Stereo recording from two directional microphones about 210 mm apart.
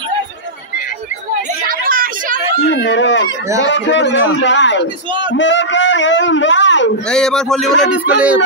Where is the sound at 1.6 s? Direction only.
45° right (ahead or behind).